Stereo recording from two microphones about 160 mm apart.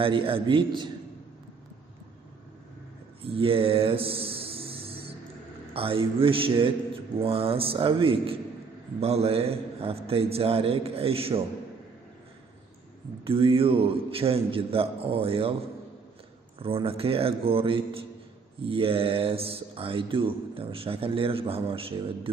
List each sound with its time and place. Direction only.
0.0 s speech: 35° right (ahead or behind)
3.3 s a sound: 35° right (ahead or behind)
5.7 s speech: 35° right (ahead or behind)
13.2 s speech: 35° right (ahead or behind)
16.6 s speech: 35° right (ahead or behind)